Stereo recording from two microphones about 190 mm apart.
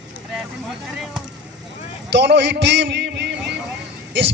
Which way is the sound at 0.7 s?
Centre (ahead or behind).